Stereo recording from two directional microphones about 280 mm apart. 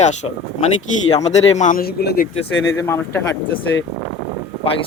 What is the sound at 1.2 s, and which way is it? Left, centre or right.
A man's voice, left.